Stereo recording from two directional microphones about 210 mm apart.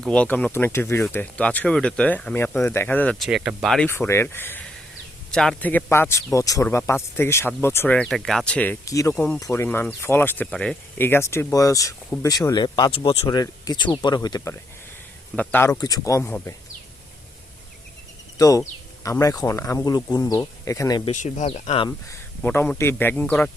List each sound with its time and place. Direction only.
0.0 s speech: 5° left (ahead or behind)
9.1 s speech: 5° left (ahead or behind)
18.3 s speech: 15° left (ahead or behind)
21.1 s speech: 35° left (ahead or behind)
21.8 s speech: 10° left (ahead or behind)